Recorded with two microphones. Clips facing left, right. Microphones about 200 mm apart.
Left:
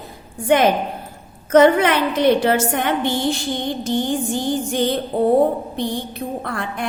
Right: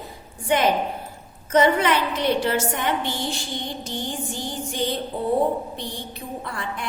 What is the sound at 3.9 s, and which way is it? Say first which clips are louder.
A woman's voice: left 12 dB; 55° left (ahead or behind).